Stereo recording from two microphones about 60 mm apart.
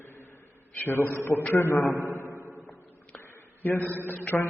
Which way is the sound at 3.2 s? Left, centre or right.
Left.